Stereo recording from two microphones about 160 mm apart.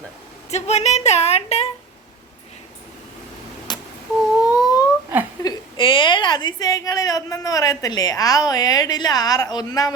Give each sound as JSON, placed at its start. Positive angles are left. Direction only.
{"t": 0.5, "sound": "a woman's voice", "side_deg": 45}
{"t": 3.7, "sound": "a sound", "side_deg": 25}
{"t": 5.4, "sound": "a woman's voice", "side_deg": 25}